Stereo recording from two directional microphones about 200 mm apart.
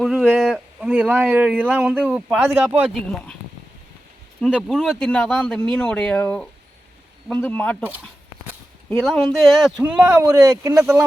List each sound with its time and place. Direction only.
0.0 s speech: centre (ahead or behind)
4.4 s speech: centre (ahead or behind)
8.9 s speech: centre (ahead or behind)
10.2 s speech: 20° right (ahead or behind)